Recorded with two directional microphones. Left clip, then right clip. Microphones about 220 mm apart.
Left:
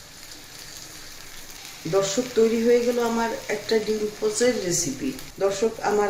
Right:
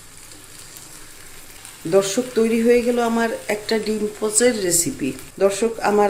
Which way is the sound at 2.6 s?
40° right (ahead or behind).